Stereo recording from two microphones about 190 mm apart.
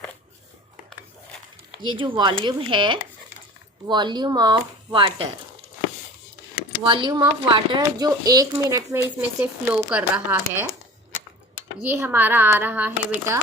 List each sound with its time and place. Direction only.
1.8 s speech: 25° right (ahead or behind)
6.8 s speech: 25° right (ahead or behind); by 10.7 s 10° right (ahead or behind)
11.9 s speech: 10° right (ahead or behind)